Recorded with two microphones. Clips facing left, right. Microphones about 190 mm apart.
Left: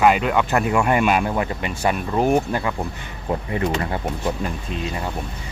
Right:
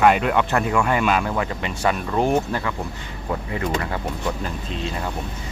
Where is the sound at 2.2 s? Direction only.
10° left (ahead or behind).